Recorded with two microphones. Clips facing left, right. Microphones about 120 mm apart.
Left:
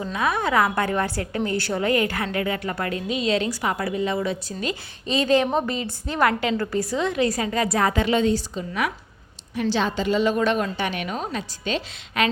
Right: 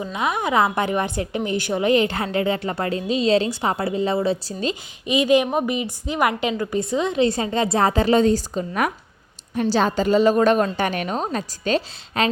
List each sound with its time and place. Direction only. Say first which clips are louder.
0.0 s a woman's voice: even; 20° right (ahead or behind)
4.7 s a woman's voice: right 2 dB; 15° right (ahead or behind); by 12.3 s 35° right (ahead or behind)